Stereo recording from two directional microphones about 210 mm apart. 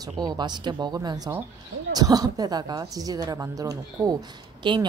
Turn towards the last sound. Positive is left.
turn(degrees=-25)  # may be behind; listen again after turning